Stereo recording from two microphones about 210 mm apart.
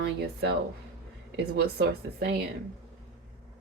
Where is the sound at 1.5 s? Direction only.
50° right (ahead or behind).